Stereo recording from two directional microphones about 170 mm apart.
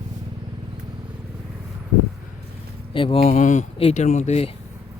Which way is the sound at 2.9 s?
30° left (ahead or behind).